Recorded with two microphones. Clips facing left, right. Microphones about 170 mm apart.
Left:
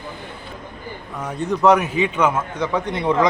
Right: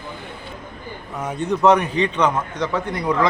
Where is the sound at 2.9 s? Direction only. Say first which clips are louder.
Left 3 dB; 25° left (ahead or behind).